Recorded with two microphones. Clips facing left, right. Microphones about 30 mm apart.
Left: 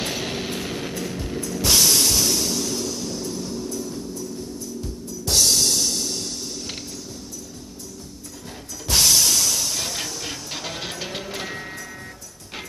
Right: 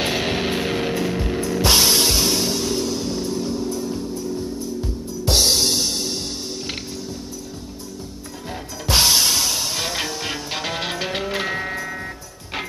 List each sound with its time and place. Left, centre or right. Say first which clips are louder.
0.0 s music: right 6 dB; right
8.8 s music: right 2 dB; right